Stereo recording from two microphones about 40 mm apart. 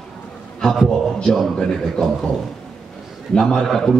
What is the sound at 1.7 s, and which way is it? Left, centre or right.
Speech, centre.